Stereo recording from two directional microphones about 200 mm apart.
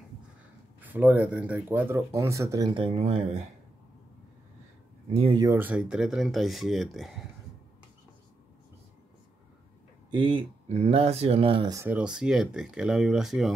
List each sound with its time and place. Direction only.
0.7 s speech: 10° right (ahead or behind); by 3.4 s 30° right (ahead or behind)
5.1 s speech: 25° right (ahead or behind)
5.5 s speech: 10° right (ahead or behind)
10.1 s speech: 25° right (ahead or behind)
11.8 s speech: 5° right (ahead or behind)